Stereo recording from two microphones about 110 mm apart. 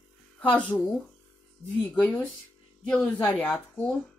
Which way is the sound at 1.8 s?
20° left (ahead or behind).